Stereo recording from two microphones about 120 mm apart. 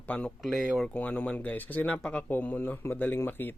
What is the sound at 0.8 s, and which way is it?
Speech, 10° left (ahead or behind).